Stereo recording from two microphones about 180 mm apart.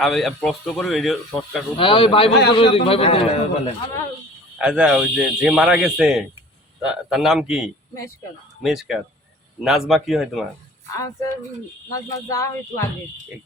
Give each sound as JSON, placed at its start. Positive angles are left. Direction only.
{"t": 0.0, "sound": "speech", "side_deg": 0}
{"t": 1.7, "sound": "a man's voice", "side_deg": 30}
{"t": 4.5, "sound": "speech", "side_deg": -5}
{"t": 10.9, "sound": "speech", "side_deg": 15}